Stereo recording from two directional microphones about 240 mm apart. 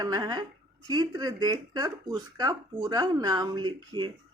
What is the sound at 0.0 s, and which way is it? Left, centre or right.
Speech, centre.